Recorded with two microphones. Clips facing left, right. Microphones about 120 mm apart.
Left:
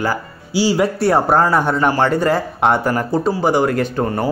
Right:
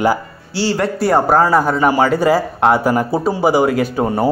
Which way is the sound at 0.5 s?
10° left (ahead or behind).